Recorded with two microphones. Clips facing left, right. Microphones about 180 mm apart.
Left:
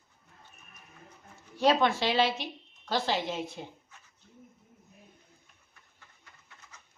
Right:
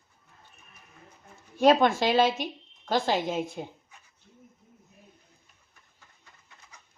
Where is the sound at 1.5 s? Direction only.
50° right (ahead or behind).